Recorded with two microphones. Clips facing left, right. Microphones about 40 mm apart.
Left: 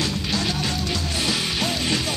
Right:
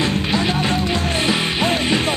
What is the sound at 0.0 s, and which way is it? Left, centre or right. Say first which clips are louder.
Music: right 6 dB; right.